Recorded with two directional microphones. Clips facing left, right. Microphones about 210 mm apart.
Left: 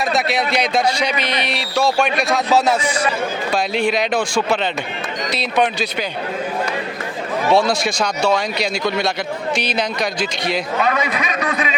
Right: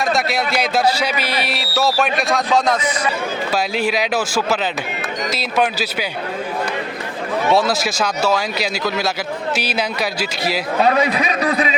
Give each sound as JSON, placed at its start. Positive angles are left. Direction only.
{"t": 0.0, "sound": "a man's voice", "side_deg": 0}
{"t": 3.5, "sound": "a man's voice", "side_deg": -5}
{"t": 7.5, "sound": "a man's voice", "side_deg": -5}
{"t": 10.8, "sound": "a man's voice", "side_deg": -35}